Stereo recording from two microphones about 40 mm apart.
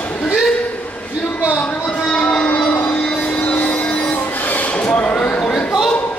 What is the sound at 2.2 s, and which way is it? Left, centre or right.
Music, centre.